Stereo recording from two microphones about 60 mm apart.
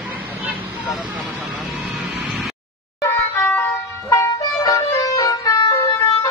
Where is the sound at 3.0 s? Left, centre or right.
Left.